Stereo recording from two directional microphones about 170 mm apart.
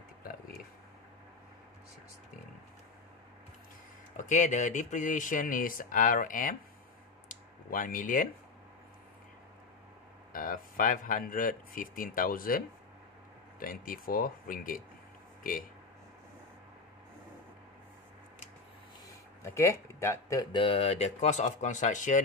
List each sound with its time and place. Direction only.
4.2 s speech: 45° left (ahead or behind)
7.2 s a sound: 50° left (ahead or behind)
10.3 s speech: 55° left (ahead or behind)
19.0 s speech: 20° left (ahead or behind); by 22.2 s 45° left (ahead or behind)